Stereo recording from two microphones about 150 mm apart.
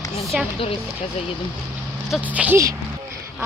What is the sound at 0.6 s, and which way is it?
Speech, 40° left (ahead or behind).